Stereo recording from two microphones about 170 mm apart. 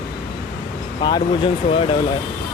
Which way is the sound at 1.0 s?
25° left (ahead or behind).